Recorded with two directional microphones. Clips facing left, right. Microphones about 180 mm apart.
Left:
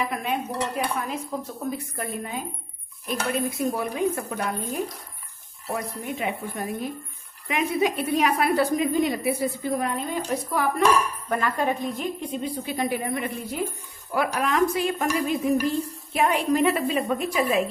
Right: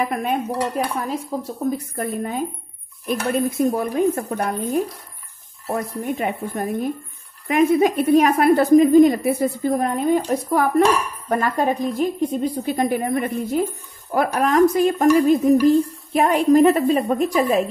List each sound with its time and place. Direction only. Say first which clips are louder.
0.1 s speech: right 5 dB; 50° right (ahead or behind)
1.7 s stir: right 6 dB; 45° right (ahead or behind)
6.0 s stir: right 5 dB; 45° right (ahead or behind)